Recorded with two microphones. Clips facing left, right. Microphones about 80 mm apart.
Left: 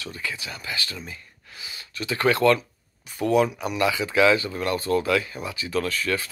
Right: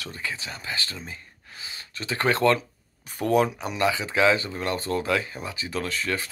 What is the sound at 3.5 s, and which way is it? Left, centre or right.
Speech, right.